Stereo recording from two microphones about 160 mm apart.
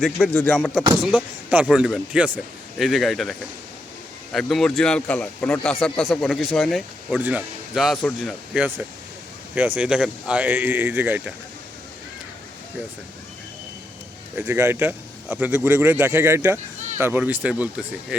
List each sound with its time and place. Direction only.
0.0 s a man's voice: centre (ahead or behind)
8.5 s a man's voice: 10° right (ahead or behind)
14.3 s a man's voice: 15° right (ahead or behind)